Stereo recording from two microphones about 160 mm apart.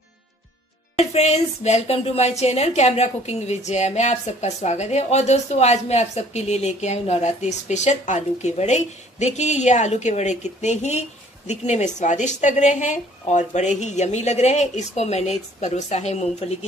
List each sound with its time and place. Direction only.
0.9 s speech: 40° left (ahead or behind)